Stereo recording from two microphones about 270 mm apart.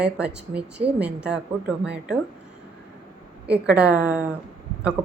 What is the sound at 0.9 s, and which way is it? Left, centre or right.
Speech, centre.